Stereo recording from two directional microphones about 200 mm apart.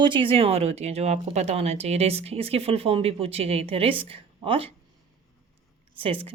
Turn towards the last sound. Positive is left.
turn(degrees=-25)  # may be behind; listen again after turning